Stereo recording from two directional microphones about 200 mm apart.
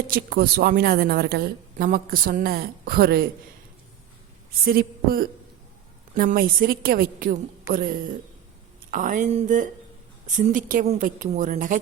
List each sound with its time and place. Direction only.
0.1 s a woman's voice: 50° right (ahead or behind)
4.6 s a woman's voice: 50° right (ahead or behind)